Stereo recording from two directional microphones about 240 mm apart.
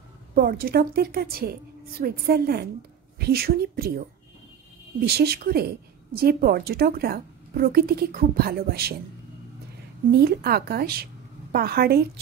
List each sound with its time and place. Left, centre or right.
0.3 s a woman's voice: right
5.0 s a woman's voice: right
10.2 s a woman's voice: right